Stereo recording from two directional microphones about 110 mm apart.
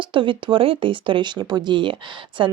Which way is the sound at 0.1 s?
50° right (ahead or behind).